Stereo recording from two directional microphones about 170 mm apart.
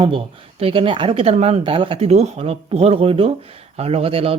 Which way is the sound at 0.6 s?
30° right (ahead or behind).